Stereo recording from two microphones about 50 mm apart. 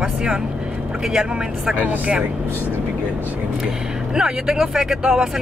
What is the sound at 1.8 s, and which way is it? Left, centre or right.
Speech, right.